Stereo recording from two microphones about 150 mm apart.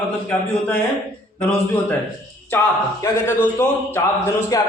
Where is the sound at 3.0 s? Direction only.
15° left (ahead or behind).